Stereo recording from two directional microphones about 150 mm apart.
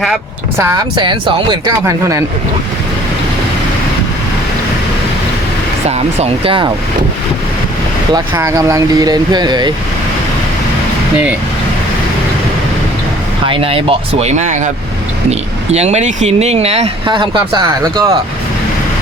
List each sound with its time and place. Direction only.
0.9 s speech: 30° right (ahead or behind)
1.8 s speech: 20° right (ahead or behind)
6.1 s speech: 35° right (ahead or behind)
8.1 s speech: 20° right (ahead or behind)
13.4 s speech: 35° right (ahead or behind)
17.1 s speech: 35° right (ahead or behind)